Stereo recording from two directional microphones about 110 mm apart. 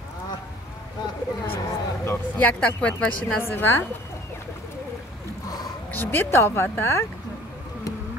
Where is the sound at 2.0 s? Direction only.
20° left (ahead or behind).